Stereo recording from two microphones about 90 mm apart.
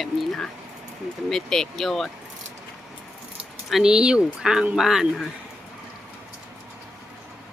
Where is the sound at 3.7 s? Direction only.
10° right (ahead or behind).